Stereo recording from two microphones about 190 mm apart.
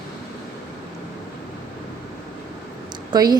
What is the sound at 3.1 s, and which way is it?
Speech, 20° right (ahead or behind).